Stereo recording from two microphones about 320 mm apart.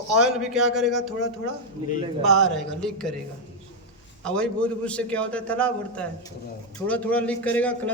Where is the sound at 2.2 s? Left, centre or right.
Centre.